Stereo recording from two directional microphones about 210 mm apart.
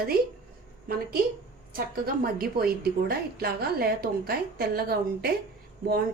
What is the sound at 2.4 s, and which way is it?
A woman's voice, 45° right (ahead or behind).